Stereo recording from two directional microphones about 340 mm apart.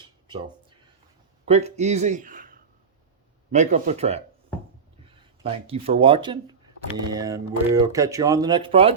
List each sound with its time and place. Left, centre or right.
1.5 s speech: centre